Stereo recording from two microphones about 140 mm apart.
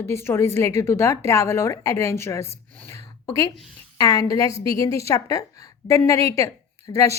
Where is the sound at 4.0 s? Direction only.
25° left (ahead or behind).